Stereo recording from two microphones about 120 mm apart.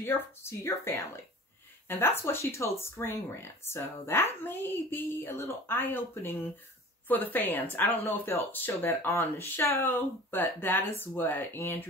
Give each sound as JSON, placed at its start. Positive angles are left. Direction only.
{"t": 0.0, "sound": "a woman's voice", "side_deg": 20}